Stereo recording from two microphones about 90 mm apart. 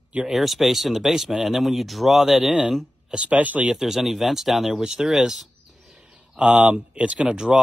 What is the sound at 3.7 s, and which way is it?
Speech, 5° right (ahead or behind).